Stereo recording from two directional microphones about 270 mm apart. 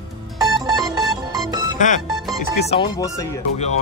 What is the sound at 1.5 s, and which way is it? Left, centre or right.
Music, centre.